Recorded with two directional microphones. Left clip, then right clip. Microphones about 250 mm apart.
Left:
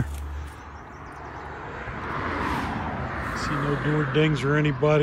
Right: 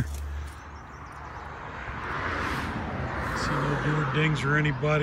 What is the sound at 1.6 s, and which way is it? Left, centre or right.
Vehicle, left.